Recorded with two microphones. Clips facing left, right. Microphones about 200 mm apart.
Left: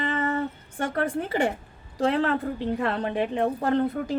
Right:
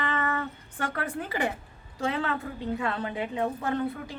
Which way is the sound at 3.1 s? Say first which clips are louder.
Left 5 dB; 55° left (ahead or behind).